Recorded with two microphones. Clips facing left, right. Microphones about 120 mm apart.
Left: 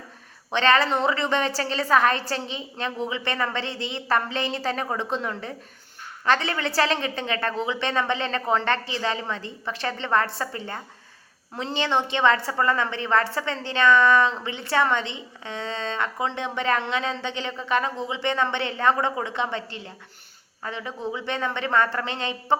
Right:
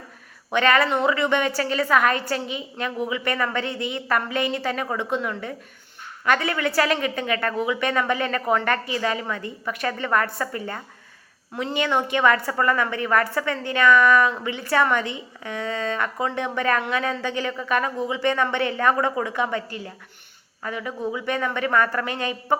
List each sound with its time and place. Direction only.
0.5 s a woman's voice: 30° left (ahead or behind)